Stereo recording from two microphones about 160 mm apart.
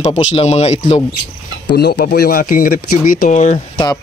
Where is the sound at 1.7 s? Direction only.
80° left; by 3.6 s 50° left (ahead or behind).